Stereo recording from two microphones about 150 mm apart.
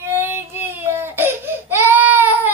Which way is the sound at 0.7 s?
15° right (ahead or behind).